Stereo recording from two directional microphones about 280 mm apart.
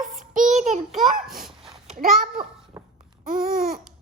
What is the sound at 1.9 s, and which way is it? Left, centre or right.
A child's voice, right.